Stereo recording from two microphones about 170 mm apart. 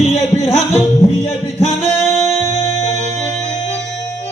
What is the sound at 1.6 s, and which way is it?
Singing, 40° right (ahead or behind).